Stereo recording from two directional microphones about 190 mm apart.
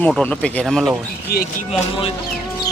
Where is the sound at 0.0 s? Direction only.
5° left (ahead or behind).